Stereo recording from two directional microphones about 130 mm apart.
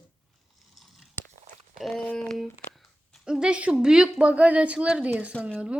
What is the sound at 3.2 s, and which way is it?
Speech, 5° right (ahead or behind).